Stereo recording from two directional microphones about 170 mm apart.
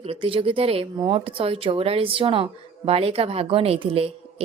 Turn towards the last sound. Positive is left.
turn(degrees=-35)  # may be behind; listen again after turning